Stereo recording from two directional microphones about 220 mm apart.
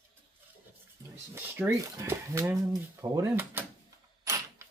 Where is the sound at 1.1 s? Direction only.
10° right (ahead or behind).